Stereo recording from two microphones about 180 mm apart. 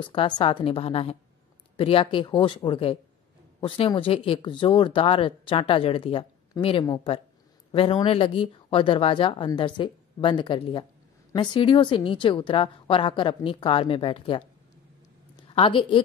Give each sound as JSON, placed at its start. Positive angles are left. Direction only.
{"t": 0.0, "sound": "speech", "side_deg": 30}
{"t": 15.5, "sound": "speech", "side_deg": 30}